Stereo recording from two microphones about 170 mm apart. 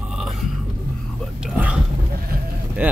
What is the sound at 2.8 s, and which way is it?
Speech, 10° right (ahead or behind).